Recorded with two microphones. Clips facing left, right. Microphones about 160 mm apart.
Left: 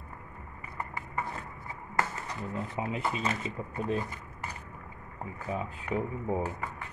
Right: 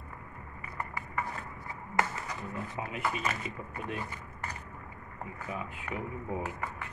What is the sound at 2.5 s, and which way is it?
Speech, 25° left (ahead or behind).